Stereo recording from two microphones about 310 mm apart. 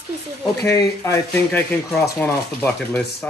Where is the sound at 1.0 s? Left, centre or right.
Centre.